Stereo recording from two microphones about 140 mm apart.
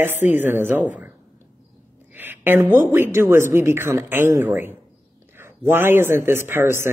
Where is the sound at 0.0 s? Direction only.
15° right (ahead or behind).